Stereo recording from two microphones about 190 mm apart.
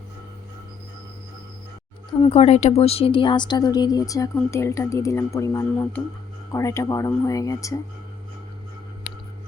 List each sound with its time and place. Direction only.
2.2 s speech: 35° left (ahead or behind); by 7.8 s 15° left (ahead or behind)